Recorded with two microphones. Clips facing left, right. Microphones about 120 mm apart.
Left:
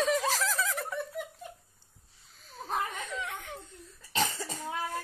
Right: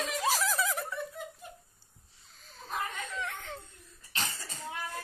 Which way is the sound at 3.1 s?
15° left (ahead or behind).